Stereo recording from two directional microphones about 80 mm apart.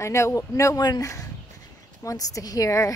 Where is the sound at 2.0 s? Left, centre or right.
Left.